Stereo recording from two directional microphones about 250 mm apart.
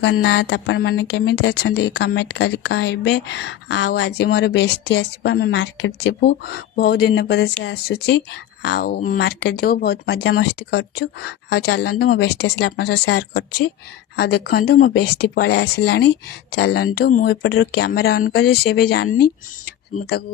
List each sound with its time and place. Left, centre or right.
0.0 s speech: left